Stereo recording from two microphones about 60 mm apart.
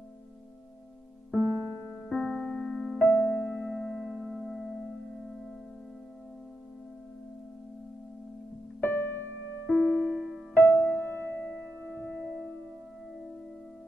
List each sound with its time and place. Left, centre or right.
2.0 s music: centre
3.0 s music: left; by 4.3 s centre
4.3 s music: centre
8.8 s music: left
9.7 s music: centre
10.5 s music: left
11.6 s music: centre